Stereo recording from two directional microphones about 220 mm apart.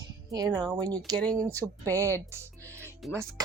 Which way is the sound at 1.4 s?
15° right (ahead or behind).